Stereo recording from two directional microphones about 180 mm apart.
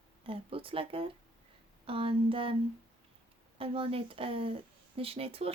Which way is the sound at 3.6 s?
30° right (ahead or behind).